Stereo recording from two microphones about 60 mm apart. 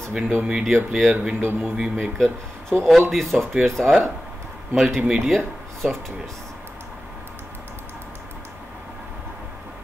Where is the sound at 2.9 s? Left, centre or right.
Centre.